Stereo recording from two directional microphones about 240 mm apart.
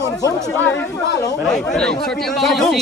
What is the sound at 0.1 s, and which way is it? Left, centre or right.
Speech, centre.